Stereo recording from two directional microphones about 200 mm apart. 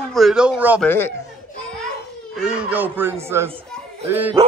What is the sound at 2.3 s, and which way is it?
Speech, 5° right (ahead or behind).